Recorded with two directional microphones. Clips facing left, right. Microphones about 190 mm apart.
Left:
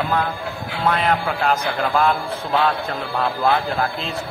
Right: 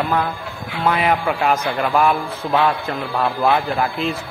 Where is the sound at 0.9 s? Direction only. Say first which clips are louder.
Right 3 dB; 5° right (ahead or behind).